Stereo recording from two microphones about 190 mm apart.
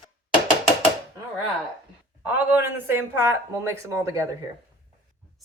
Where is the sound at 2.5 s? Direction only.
10° right (ahead or behind).